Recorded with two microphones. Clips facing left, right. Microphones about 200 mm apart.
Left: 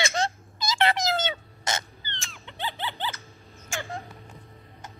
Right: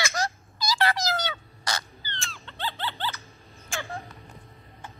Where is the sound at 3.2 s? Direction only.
Centre (ahead or behind).